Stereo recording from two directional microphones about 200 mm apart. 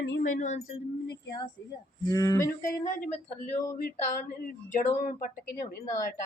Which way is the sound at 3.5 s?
45° left (ahead or behind).